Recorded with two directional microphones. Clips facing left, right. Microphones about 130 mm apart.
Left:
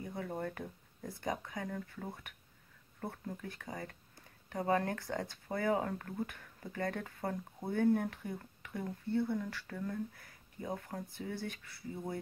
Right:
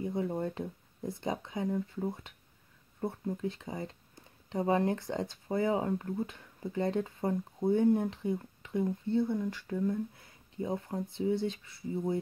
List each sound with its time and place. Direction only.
0.0 s speech: 20° right (ahead or behind)